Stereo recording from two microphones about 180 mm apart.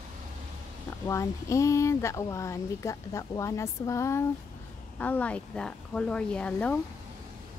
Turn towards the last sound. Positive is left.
turn(degrees=5)  # may be behind; listen again after turning